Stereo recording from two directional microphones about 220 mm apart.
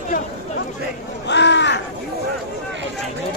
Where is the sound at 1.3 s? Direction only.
55° left (ahead or behind).